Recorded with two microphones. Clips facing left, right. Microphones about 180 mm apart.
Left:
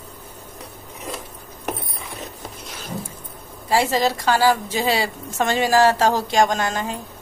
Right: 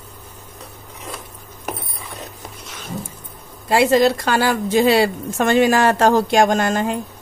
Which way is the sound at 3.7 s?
60° right (ahead or behind).